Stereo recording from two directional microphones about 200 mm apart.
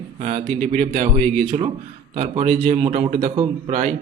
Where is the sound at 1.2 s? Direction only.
5° left (ahead or behind).